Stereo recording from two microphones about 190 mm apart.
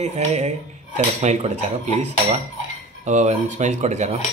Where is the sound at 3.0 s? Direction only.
40° right (ahead or behind).